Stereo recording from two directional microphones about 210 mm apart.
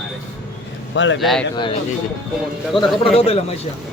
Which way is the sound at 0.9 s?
60° left (ahead or behind).